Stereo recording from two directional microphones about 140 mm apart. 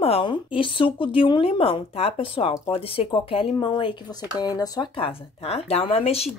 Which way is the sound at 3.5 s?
35° left (ahead or behind).